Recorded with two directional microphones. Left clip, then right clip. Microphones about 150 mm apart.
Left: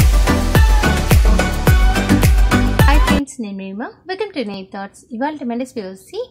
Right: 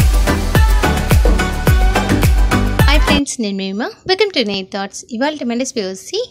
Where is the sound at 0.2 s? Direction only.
Centre (ahead or behind).